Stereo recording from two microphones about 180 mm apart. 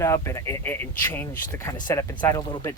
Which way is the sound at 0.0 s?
15° left (ahead or behind).